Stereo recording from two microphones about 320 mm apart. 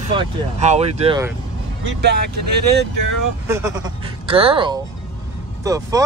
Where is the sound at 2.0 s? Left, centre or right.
Right.